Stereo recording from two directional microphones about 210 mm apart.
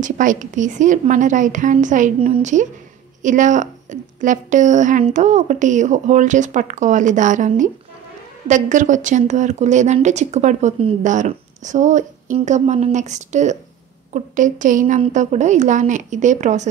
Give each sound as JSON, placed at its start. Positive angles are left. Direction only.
{"t": 0.0, "sound": "a woman's voice", "side_deg": -35}